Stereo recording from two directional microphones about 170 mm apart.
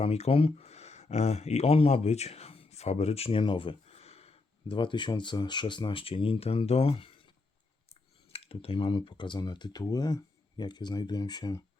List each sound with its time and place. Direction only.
0.0 s speech: 40° left (ahead or behind)
8.3 s speech: 35° left (ahead or behind)